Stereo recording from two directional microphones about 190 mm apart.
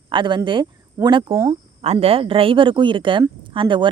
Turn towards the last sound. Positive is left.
turn(degrees=-25)  # may be behind; listen again after turning